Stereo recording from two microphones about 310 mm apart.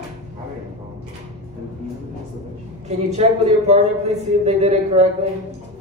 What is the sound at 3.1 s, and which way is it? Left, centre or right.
A man's voice, right.